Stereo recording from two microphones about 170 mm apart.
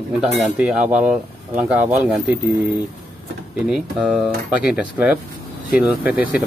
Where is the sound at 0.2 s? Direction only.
10° right (ahead or behind).